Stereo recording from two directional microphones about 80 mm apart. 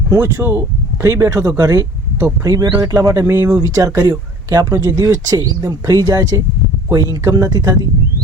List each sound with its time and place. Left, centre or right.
0.1 s speech: right